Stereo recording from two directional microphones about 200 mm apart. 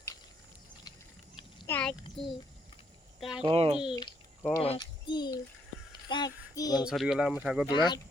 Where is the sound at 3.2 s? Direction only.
Centre (ahead or behind).